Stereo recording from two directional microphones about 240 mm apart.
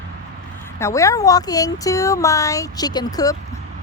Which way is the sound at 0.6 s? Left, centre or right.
Centre.